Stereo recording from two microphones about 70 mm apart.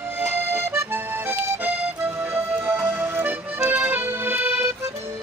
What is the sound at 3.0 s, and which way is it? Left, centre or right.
Accordion, right.